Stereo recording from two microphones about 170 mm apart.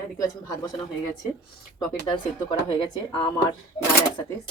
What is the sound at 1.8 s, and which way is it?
Speech, 30° left (ahead or behind).